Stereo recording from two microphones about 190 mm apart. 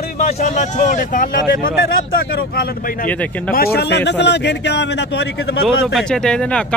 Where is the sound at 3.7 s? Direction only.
65° left (ahead or behind).